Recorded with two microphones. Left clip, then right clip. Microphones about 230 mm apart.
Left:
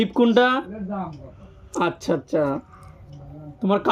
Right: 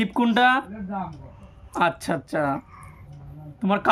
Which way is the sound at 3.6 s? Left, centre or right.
Right.